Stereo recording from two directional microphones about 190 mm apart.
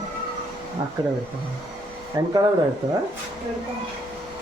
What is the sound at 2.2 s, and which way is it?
Speech, 20° right (ahead or behind).